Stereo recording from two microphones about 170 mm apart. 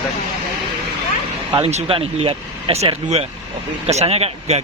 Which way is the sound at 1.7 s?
35° right (ahead or behind).